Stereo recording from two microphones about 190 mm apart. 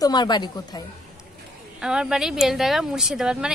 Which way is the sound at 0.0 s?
20° left (ahead or behind).